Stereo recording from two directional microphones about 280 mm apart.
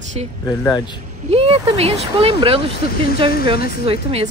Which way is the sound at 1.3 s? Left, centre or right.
Right.